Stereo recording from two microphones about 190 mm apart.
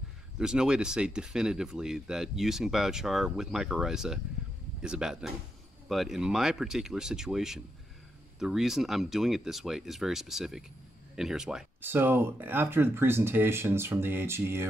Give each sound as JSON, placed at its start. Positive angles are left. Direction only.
{"t": 0.4, "sound": "speech", "side_deg": -5}